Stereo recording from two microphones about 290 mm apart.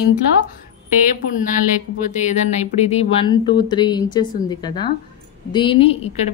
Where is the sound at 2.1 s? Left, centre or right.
Left.